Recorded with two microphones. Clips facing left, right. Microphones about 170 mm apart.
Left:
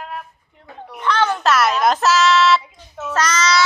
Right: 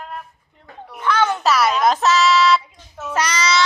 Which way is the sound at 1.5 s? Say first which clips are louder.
Even; centre (ahead or behind).